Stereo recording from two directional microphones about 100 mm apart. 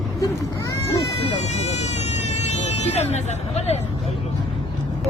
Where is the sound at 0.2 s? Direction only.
30° left (ahead or behind).